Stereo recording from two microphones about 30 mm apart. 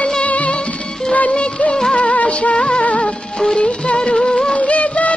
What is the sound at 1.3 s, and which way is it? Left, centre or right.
Music of bollywood, left.